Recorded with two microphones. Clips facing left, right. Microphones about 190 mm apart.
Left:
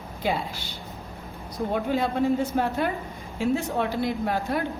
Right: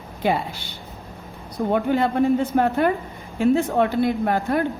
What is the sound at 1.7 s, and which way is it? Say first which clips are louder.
A woman's voice: right 5 dB; 60° right (ahead or behind).